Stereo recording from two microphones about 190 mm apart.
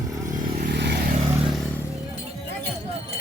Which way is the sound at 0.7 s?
60° right (ahead or behind).